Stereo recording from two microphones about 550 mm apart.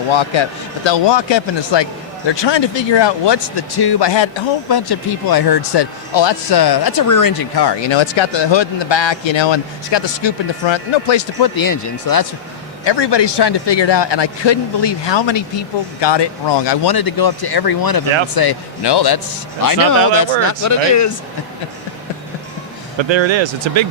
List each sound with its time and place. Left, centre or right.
0.1 s a man's voice: left
12.8 s a man's voice: left
23.0 s speech: right